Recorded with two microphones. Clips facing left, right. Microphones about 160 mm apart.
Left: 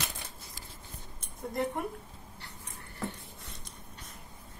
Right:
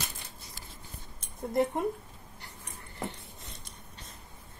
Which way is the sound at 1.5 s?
20° right (ahead or behind).